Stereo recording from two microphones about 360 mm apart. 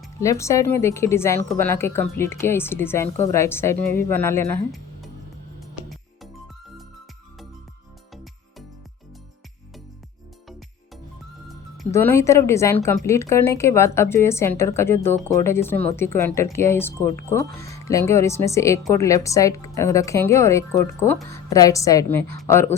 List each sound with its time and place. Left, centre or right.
0.2 s a woman's voice: centre
4.7 s music: centre
8.1 s music: centre
11.8 s a woman's voice: centre